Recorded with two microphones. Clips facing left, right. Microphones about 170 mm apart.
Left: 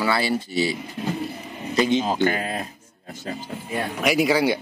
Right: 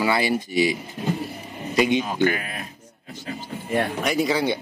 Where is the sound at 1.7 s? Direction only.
15° right (ahead or behind).